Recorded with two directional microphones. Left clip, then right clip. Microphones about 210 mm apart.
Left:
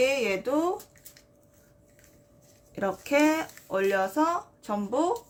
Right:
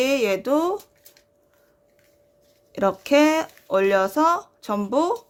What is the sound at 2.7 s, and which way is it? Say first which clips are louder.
Speech: right 7 dB; 40° right (ahead or behind).